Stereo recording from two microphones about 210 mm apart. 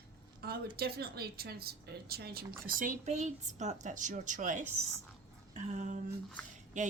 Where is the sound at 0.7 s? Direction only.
45° right (ahead or behind).